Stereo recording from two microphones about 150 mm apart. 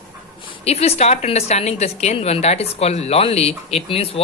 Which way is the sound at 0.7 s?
45° left (ahead or behind).